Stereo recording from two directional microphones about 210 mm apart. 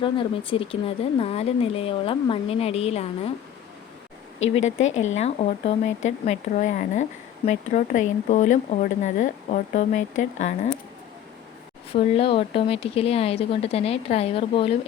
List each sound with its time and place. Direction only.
0.0 s speech: 25° left (ahead or behind)
4.5 s speech: 35° left (ahead or behind)
11.9 s speech: 25° left (ahead or behind)